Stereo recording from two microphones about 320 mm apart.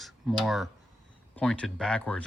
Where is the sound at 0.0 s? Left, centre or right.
Centre.